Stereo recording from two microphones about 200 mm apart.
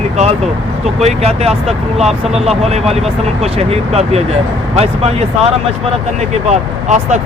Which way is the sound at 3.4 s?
30° right (ahead or behind).